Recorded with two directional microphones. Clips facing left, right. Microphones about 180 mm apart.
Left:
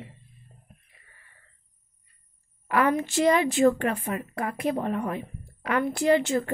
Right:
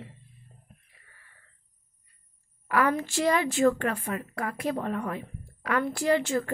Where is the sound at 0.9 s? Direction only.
20° left (ahead or behind).